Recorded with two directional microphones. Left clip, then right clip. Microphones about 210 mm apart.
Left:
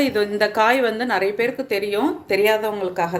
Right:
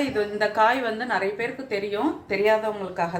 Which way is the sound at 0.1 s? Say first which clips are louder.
Left 4 dB; 45° left (ahead or behind).